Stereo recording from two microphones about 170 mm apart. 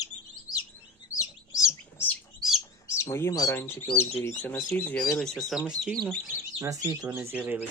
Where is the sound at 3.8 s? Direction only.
35° left (ahead or behind).